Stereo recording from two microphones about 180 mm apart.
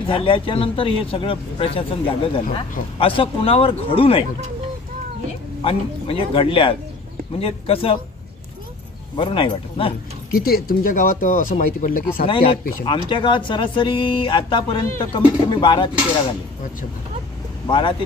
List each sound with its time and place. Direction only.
0.0 s speech: 30° left (ahead or behind)
5.6 s speech: 30° left (ahead or behind)
9.1 s speech: 30° left (ahead or behind)
10.3 s speech: 60° left (ahead or behind)
12.3 s speech: 30° left (ahead or behind)
17.6 s speech: 25° left (ahead or behind)